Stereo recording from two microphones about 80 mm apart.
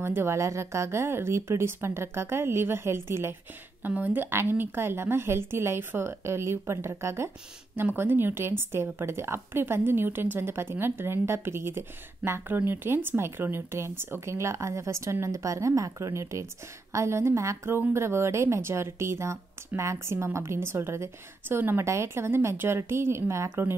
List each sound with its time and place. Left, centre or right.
0.0 s a woman's voice: right